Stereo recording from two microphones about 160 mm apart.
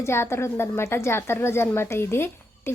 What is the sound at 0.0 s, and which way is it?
A woman's voice, 15° left (ahead or behind).